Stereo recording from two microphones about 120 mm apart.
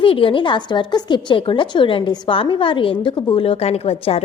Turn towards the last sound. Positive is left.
turn(degrees=55)  # may be behind; listen again after turning